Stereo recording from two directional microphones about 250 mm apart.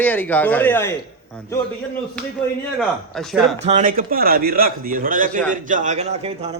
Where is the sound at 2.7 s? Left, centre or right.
Centre.